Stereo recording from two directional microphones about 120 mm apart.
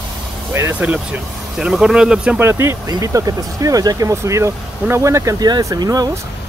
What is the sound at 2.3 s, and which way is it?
Speech, 20° right (ahead or behind).